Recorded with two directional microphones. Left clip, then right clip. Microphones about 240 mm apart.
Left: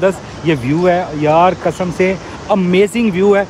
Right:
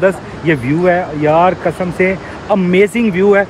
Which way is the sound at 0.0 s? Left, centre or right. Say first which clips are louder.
Right 1 dB; centre.